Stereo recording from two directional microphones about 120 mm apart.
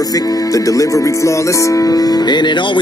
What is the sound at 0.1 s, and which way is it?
Music, 30° left (ahead or behind).